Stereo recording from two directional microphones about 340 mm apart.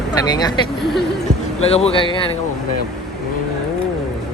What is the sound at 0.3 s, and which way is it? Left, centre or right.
Speech, centre.